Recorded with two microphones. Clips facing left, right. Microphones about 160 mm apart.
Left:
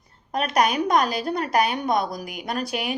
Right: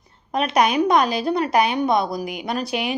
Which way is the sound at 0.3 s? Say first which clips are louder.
Right 3 dB; 40° left (ahead or behind).